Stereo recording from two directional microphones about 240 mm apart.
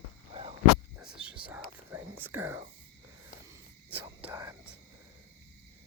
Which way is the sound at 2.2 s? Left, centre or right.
Centre.